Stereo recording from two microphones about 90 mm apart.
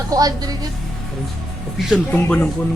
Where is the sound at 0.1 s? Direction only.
45° right (ahead or behind).